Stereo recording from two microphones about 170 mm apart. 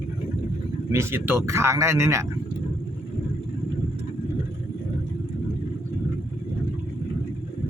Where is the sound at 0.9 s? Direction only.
15° right (ahead or behind).